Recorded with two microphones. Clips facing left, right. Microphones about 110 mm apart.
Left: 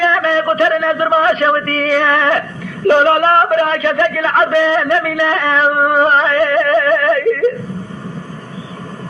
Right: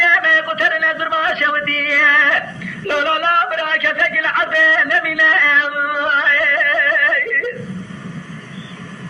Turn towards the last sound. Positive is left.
turn(degrees=30)  # may be behind; listen again after turning